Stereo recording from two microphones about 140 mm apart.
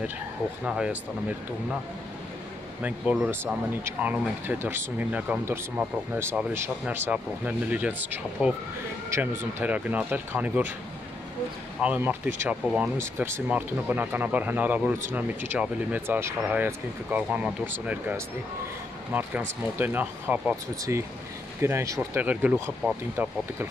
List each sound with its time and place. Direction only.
0.7 s speech: 5° right (ahead or behind)
2.8 s speech: 10° right (ahead or behind)
11.8 s speech: 10° right (ahead or behind)
22.2 s speech: 10° right (ahead or behind)